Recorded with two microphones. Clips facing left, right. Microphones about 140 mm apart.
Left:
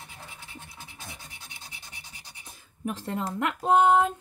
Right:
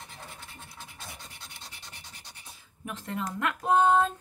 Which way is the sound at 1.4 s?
10° left (ahead or behind).